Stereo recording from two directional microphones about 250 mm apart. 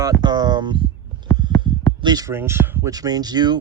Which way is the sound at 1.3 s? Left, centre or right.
Centre.